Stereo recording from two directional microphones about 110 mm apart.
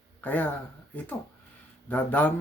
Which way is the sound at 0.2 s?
15° left (ahead or behind).